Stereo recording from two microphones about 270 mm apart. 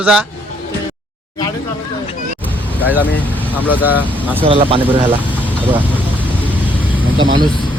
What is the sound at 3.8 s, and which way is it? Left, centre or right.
Speech, centre.